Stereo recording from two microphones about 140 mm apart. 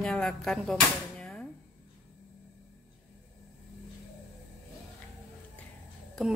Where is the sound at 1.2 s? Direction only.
5° left (ahead or behind).